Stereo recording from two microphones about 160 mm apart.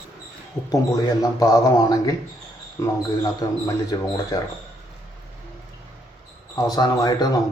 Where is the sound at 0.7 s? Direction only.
20° left (ahead or behind).